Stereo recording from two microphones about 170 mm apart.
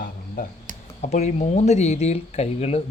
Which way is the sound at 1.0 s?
40° left (ahead or behind).